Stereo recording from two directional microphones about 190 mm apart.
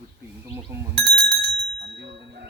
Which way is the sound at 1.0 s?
65° right (ahead or behind).